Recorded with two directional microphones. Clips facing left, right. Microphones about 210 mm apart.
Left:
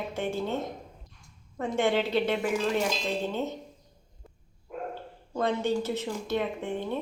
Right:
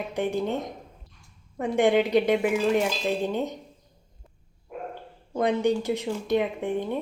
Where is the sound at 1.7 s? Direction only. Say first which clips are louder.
Right 5 dB; 15° right (ahead or behind).